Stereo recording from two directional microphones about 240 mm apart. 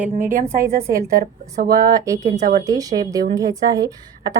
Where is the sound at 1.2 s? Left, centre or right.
Right.